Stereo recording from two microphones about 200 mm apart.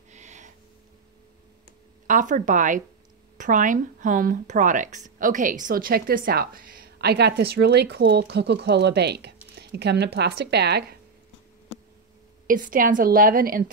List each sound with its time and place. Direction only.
0.1 s a sound: 35° right (ahead or behind)
2.0 s speech: 40° right (ahead or behind); by 11.0 s 55° right (ahead or behind)
12.4 s speech: 40° right (ahead or behind)